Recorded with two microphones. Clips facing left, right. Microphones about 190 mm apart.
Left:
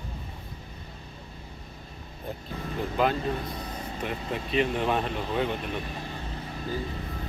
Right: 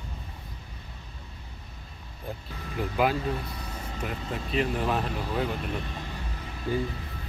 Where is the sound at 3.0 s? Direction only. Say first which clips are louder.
Even; 10° right (ahead or behind).